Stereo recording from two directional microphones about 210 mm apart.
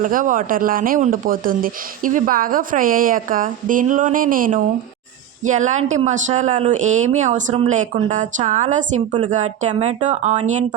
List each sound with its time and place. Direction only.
0.0 s speech: 40° right (ahead or behind)